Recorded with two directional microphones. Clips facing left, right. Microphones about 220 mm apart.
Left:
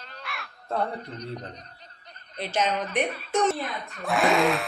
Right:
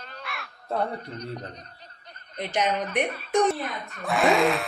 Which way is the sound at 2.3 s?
15° right (ahead or behind).